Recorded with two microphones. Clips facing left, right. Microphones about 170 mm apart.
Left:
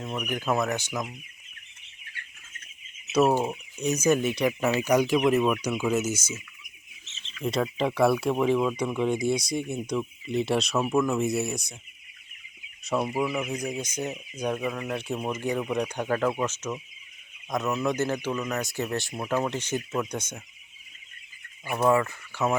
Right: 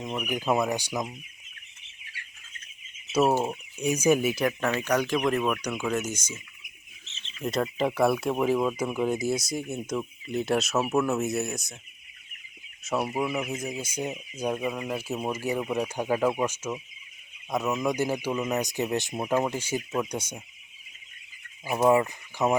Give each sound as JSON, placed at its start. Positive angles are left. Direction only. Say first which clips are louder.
{"t": 0.2, "sound": "speech", "louder": "right 1 dB", "side_deg": -10}
{"t": 3.4, "sound": "speech", "louder": "even", "side_deg": -5}
{"t": 4.6, "sound": "speech", "louder": "left 6 dB", "side_deg": 10}
{"t": 7.4, "sound": "speech", "louder": "even", "side_deg": 0}
{"t": 12.8, "sound": "speech", "louder": "left 1 dB", "side_deg": 0}
{"t": 21.8, "sound": "speech", "louder": "right 1 dB", "side_deg": -15}